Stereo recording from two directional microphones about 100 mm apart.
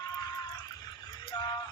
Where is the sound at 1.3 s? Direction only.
45° left (ahead or behind).